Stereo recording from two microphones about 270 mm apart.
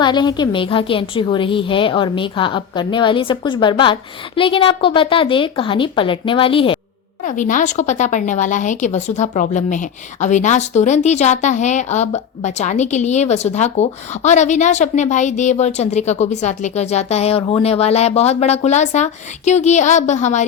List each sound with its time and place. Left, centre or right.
0.0 s a woman's voice: centre